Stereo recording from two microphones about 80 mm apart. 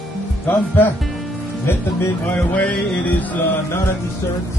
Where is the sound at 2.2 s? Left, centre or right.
Centre.